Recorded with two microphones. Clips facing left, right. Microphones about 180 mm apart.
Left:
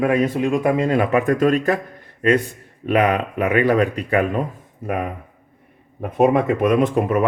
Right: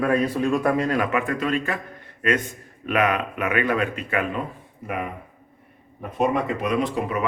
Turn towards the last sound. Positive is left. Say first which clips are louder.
# left 7 dB
turn(degrees=50)  # may be behind; listen again after turning